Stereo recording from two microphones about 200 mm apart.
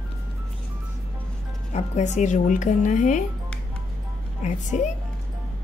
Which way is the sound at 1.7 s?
35° left (ahead or behind).